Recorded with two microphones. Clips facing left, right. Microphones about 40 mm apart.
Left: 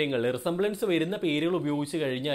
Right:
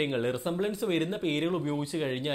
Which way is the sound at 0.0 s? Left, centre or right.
Centre.